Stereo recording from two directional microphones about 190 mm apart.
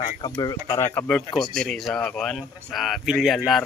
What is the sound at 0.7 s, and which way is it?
Speech, 10° left (ahead or behind).